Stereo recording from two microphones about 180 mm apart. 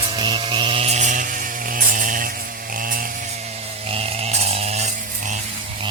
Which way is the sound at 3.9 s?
35° right (ahead or behind).